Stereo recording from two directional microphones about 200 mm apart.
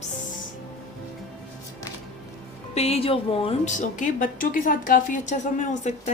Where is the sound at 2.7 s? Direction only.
30° left (ahead or behind).